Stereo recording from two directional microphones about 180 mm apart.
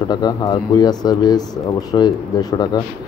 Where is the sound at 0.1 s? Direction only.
25° left (ahead or behind).